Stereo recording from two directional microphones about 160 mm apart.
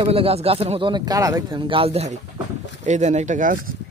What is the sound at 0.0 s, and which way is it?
Speech, 35° right (ahead or behind).